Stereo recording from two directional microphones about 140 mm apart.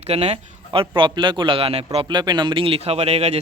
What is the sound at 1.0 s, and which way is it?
Speech, 35° right (ahead or behind).